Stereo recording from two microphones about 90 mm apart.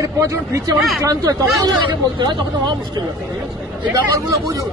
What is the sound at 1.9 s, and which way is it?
Speech, 60° right (ahead or behind).